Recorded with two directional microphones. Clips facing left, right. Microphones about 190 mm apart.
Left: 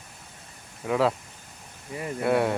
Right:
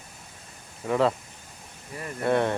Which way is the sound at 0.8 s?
5° left (ahead or behind).